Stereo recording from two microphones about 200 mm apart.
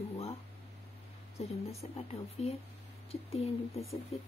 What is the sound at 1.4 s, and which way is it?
Speech, 30° left (ahead or behind).